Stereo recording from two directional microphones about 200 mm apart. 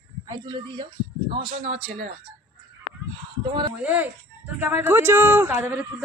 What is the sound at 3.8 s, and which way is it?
Speech, 10° right (ahead or behind).